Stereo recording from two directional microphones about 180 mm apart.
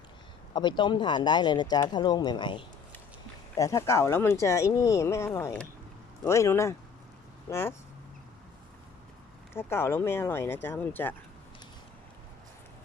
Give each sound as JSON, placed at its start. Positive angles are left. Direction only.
{"t": 0.5, "sound": "speech", "side_deg": 25}
{"t": 9.6, "sound": "speech", "side_deg": 15}